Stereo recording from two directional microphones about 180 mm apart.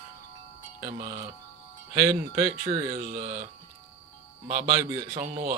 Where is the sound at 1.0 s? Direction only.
40° right (ahead or behind).